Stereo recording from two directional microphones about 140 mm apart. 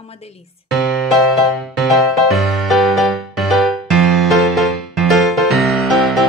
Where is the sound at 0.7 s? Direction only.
Centre (ahead or behind).